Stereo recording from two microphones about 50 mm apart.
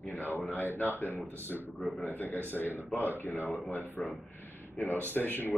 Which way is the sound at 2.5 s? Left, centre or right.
Left.